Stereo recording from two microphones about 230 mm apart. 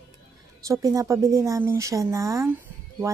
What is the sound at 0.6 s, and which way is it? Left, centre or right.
Speech, centre.